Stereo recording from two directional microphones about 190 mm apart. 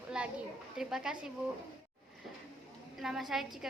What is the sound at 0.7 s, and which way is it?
Speech, 5° right (ahead or behind).